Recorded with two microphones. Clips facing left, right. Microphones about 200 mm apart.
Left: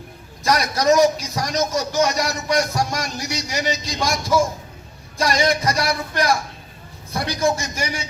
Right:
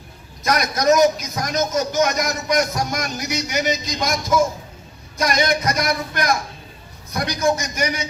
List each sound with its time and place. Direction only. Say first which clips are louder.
0.4 s a man's voice: even; 30° left (ahead or behind)